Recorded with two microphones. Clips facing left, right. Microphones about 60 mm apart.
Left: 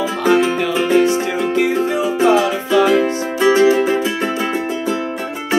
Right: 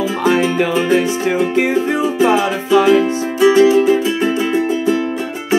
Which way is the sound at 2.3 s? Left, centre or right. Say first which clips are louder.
Right 1 dB; centre.